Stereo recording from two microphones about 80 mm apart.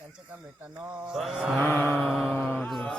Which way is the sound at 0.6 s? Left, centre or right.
Right.